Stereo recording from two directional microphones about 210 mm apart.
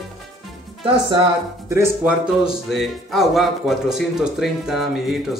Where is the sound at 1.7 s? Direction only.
10° right (ahead or behind).